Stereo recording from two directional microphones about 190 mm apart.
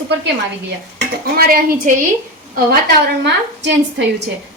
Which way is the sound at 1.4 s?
50° right (ahead or behind).